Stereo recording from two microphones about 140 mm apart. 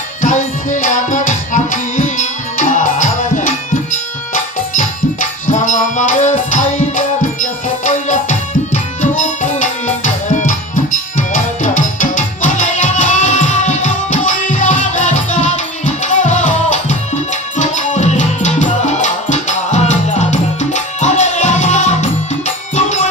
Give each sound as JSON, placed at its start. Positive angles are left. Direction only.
{"t": 0.2, "sound": "music", "side_deg": 60}
{"t": 5.5, "sound": "music", "side_deg": 60}
{"t": 11.6, "sound": "music", "side_deg": 65}